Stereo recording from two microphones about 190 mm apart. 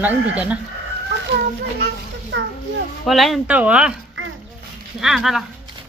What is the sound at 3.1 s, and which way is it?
Speech, centre (ahead or behind).